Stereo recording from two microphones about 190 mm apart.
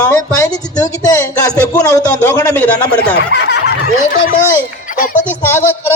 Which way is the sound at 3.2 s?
60° left (ahead or behind).